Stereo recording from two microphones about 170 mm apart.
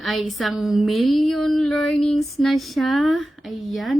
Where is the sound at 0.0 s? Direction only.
Centre (ahead or behind).